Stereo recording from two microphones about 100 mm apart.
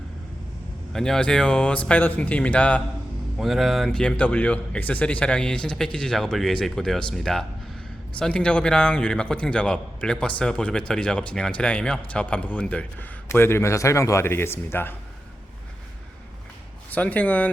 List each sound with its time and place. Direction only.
0.9 s a man's voice: 5° left (ahead or behind)
3.3 s a man's voice: centre (ahead or behind); by 14.9 s 25° left (ahead or behind)
16.9 s a man's voice: 15° left (ahead or behind)